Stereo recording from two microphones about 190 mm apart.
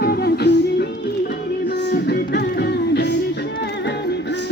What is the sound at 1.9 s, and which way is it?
Music, 60° left (ahead or behind).